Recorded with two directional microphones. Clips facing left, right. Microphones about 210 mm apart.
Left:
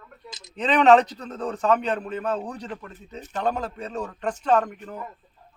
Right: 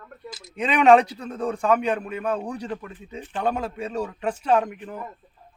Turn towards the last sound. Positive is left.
turn(degrees=-10)  # may be behind; listen again after turning